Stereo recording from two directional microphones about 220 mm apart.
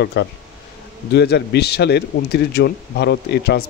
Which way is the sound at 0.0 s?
50° left (ahead or behind).